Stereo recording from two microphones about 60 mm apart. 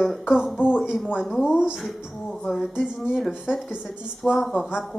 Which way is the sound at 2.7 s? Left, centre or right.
Centre.